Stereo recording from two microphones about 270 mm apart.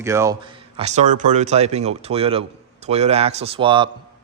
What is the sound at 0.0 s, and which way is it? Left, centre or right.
Speech, centre.